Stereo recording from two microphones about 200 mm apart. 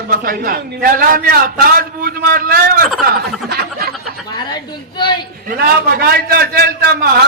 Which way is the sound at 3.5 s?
55° right (ahead or behind).